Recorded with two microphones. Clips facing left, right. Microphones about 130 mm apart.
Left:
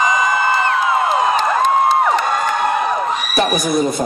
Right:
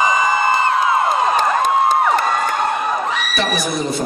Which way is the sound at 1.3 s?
45° right (ahead or behind).